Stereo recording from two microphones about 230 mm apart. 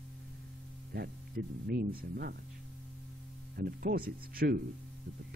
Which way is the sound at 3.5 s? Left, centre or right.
Right.